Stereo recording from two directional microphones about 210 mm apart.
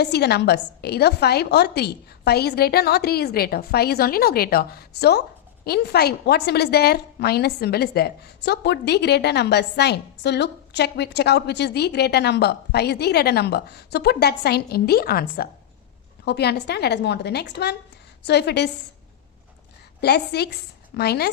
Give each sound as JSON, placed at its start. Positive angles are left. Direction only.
{"t": 0.0, "sound": "a woman's voice", "side_deg": 50}
{"t": 20.0, "sound": "a woman's voice", "side_deg": 50}